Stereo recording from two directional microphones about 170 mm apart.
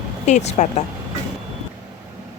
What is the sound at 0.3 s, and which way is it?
Speech, 45° left (ahead or behind).